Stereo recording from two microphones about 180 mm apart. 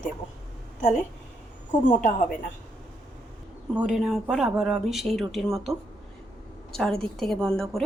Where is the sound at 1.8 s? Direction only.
45° left (ahead or behind).